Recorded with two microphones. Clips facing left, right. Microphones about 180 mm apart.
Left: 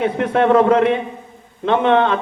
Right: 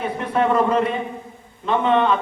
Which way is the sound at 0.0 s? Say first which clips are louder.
Left 5 dB; 75° left (ahead or behind).